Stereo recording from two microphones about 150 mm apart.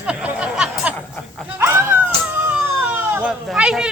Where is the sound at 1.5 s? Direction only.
15° right (ahead or behind).